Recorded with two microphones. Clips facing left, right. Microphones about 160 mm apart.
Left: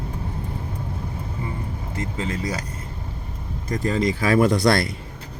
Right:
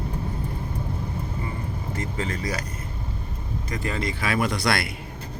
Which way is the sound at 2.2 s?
20° left (ahead or behind).